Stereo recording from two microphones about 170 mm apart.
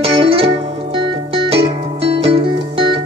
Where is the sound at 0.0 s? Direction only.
35° right (ahead or behind).